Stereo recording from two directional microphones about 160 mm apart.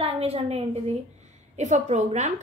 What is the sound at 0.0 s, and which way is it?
A woman's voice, 40° right (ahead or behind).